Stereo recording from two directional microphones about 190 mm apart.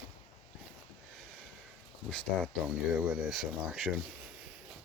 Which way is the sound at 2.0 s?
5° left (ahead or behind).